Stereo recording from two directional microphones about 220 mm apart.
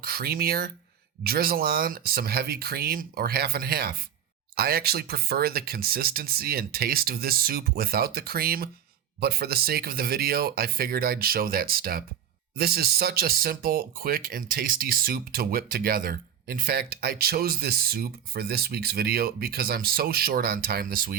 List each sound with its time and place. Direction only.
0.0 s speech: 45° right (ahead or behind)